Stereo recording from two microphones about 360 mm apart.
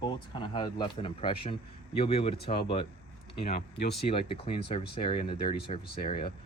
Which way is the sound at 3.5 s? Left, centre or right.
Left.